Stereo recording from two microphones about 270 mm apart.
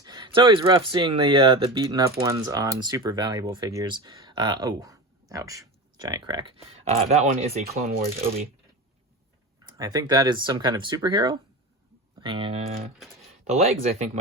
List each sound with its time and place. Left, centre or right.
0.0 s speech: centre
9.7 s speech: centre